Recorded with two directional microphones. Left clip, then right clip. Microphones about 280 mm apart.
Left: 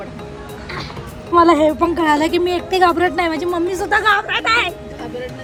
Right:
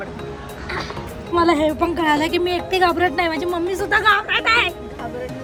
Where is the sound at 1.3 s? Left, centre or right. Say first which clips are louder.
Left 5 dB; centre.